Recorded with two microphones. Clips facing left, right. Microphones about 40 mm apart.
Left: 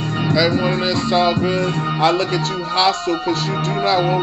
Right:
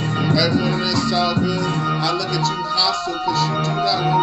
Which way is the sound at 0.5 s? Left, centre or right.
Left.